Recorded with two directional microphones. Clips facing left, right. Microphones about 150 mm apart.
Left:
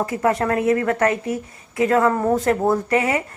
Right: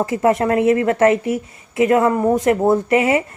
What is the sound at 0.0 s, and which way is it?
Speech, 25° right (ahead or behind).